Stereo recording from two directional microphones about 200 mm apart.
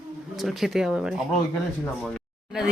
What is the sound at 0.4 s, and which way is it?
Speech, centre (ahead or behind).